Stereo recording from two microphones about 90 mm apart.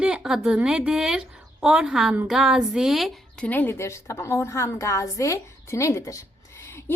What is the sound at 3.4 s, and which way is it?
A woman's voice, 20° left (ahead or behind).